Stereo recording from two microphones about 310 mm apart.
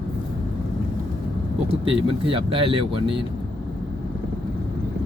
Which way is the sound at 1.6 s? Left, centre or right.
Centre.